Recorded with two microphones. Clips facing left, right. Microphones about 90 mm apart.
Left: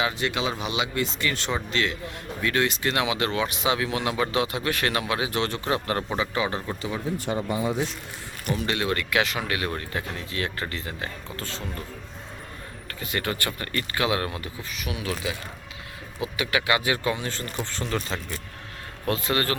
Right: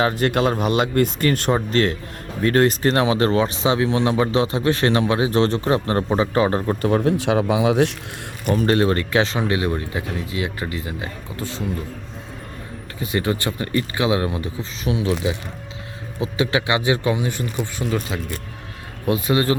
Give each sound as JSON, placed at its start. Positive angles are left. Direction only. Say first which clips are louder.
{"t": 0.0, "sound": "speech", "louder": "right 8 dB", "side_deg": -45}
{"t": 6.8, "sound": "speech", "louder": "right 12 dB", "side_deg": -65}
{"t": 8.4, "sound": "speech", "louder": "right 9 dB", "side_deg": -45}
{"t": 13.0, "sound": "speech", "louder": "right 7 dB", "side_deg": -20}
{"t": 16.2, "sound": "speech", "louder": "right 5 dB", "side_deg": -25}